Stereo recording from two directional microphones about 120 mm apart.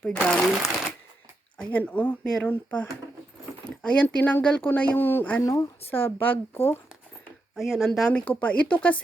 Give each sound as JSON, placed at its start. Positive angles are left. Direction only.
{"t": 0.0, "sound": "speech", "side_deg": 10}
{"t": 3.8, "sound": "speech", "side_deg": 10}
{"t": 5.4, "sound": "speech", "side_deg": 25}
{"t": 7.5, "sound": "speech", "side_deg": 0}